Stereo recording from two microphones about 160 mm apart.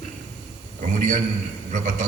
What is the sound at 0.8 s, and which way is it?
A man's voice, 50° right (ahead or behind).